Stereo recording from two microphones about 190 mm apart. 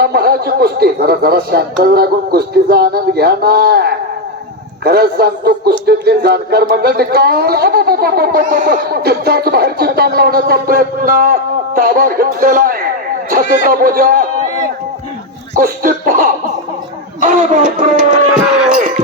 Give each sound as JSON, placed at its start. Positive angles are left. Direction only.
{"t": 0.0, "sound": "speech", "side_deg": -55}
{"t": 15.5, "sound": "a man's voice", "side_deg": -50}
{"t": 18.3, "sound": "a sound", "side_deg": -5}
{"t": 18.7, "sound": "music", "side_deg": -45}